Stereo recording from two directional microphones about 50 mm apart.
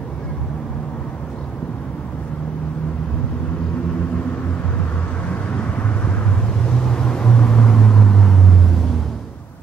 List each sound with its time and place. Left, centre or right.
5.6 s vehicle: left
6.6 s vehicle: centre